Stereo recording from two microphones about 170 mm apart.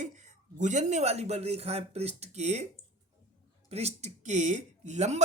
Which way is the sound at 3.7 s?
40° right (ahead or behind).